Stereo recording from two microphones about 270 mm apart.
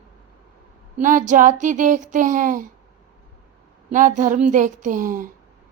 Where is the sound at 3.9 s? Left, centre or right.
Right.